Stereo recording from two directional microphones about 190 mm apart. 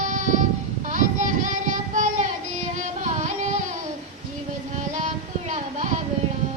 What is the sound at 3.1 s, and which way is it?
Music, 40° right (ahead or behind).